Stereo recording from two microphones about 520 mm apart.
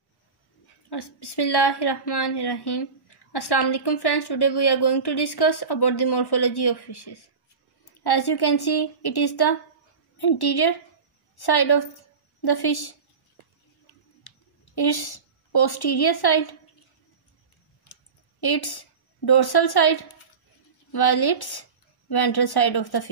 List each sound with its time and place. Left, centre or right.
0.8 s a woman's voice: left
14.2 s a woman's voice: left
18.4 s a woman's voice: left